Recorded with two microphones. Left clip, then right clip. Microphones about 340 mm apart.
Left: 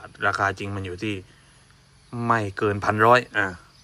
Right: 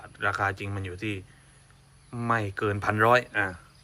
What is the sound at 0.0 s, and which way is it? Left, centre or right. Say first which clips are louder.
Speech: left 4 dB; centre.